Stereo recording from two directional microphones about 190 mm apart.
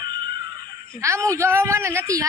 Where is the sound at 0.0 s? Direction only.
25° right (ahead or behind).